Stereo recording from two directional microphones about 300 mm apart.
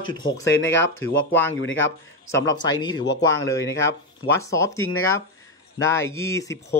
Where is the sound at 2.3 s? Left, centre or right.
Centre.